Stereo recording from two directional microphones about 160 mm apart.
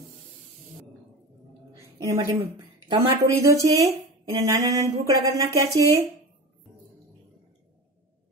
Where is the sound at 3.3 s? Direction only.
20° right (ahead or behind).